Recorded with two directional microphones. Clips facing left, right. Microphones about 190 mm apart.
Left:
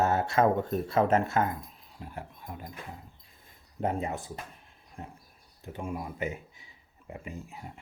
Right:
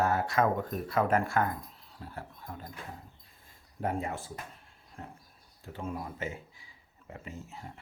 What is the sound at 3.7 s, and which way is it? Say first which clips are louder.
Speech: left 2 dB; 20° left (ahead or behind).